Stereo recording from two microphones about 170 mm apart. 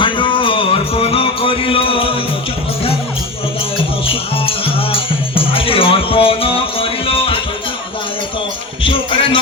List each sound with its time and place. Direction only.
0.0 s music: 30° left (ahead or behind)
4.0 s music: 35° left (ahead or behind)
8.8 s music: 30° left (ahead or behind)